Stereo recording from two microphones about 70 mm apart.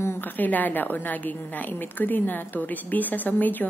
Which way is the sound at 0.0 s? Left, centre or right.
Left.